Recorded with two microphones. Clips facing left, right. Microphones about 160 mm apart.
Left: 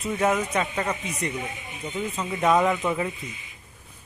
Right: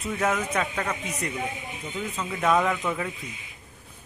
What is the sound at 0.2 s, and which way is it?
A man's voice, 10° left (ahead or behind).